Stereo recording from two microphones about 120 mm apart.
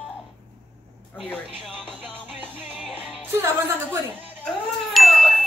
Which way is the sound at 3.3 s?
20° right (ahead or behind).